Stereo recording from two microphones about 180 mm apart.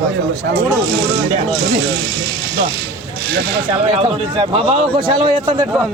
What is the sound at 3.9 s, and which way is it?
A man's voice, 30° right (ahead or behind).